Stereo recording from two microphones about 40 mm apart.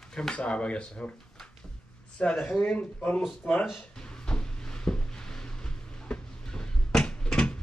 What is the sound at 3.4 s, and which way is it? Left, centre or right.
Speech, left.